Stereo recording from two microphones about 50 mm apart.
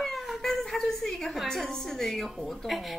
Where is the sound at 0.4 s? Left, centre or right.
Centre.